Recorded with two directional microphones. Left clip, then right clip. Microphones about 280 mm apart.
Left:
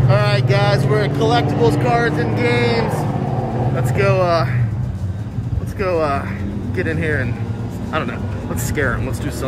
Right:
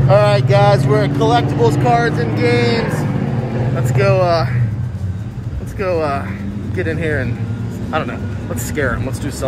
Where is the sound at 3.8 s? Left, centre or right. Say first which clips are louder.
Right 2 dB; centre.